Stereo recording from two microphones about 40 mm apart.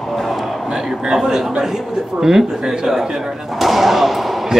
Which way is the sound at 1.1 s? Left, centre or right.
Centre.